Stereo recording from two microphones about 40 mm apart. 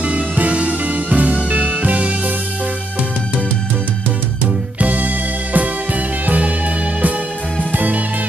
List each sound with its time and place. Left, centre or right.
0.0 s music: right
4.7 s music: right
7.7 s music: right